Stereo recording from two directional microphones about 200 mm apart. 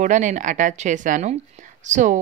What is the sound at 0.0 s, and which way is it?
A woman's voice, 40° right (ahead or behind).